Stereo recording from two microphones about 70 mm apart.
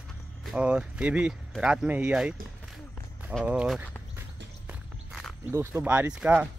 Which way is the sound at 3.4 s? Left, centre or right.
Centre.